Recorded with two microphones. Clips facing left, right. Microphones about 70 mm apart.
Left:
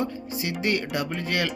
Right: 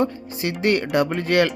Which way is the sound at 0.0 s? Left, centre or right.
Right.